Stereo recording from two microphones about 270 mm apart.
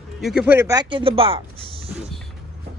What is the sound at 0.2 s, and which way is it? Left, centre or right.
Speech, centre.